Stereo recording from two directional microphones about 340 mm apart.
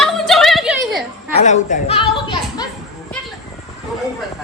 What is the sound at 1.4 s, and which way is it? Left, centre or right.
A woman's voice, left.